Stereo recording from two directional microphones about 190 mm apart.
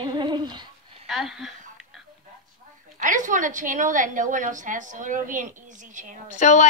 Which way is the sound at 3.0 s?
40° right (ahead or behind).